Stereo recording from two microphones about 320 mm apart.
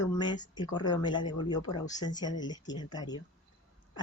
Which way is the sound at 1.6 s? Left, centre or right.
Left.